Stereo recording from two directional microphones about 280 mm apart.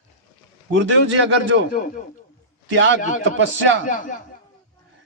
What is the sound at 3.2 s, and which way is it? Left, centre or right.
Speech, right.